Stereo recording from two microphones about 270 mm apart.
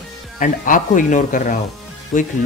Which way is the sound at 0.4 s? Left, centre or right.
Left.